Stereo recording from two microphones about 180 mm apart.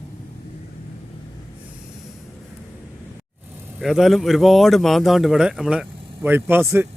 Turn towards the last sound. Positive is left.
turn(degrees=-15)  # may be behind; listen again after turning